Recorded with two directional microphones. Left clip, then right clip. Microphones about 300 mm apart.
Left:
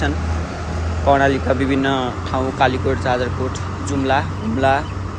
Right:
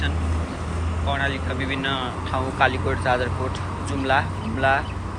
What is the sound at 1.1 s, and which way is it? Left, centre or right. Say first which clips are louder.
Speech: left 11 dB; left.